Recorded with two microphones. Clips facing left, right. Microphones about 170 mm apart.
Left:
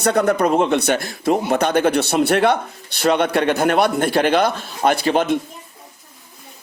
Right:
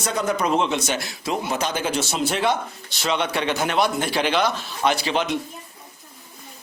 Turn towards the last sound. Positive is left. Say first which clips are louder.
# left 5 dB
turn(degrees=50)  # may be behind; listen again after turning